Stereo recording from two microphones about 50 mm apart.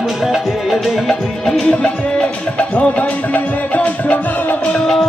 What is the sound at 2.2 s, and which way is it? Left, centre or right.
Music, left.